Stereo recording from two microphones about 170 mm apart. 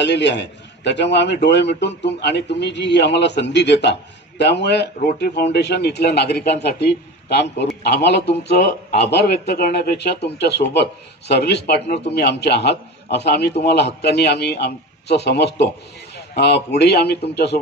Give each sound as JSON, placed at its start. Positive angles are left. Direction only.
{"t": 0.0, "sound": "a man's voice", "side_deg": 90}
{"t": 9.1, "sound": "a man's voice", "side_deg": 70}